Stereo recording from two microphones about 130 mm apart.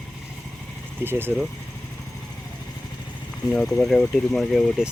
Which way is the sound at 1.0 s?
15° right (ahead or behind).